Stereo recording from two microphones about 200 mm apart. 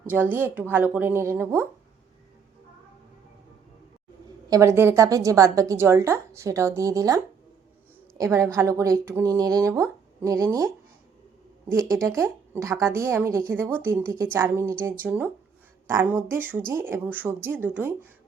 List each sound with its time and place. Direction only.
0.0 s a woman's voice: 10° right (ahead or behind)
4.4 s a woman's voice: 15° right (ahead or behind)
8.2 s a woman's voice: 15° right (ahead or behind)
12.0 s a woman's voice: 15° right (ahead or behind)